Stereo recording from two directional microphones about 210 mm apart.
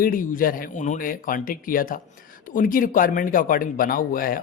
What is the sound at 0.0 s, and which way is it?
A man's voice, 40° left (ahead or behind).